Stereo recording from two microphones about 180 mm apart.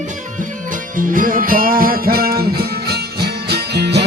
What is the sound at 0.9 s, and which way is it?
Music, 50° right (ahead or behind).